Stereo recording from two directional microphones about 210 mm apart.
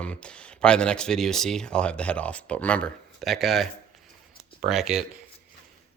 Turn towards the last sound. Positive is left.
turn(degrees=0)  # may be behind; listen again after turning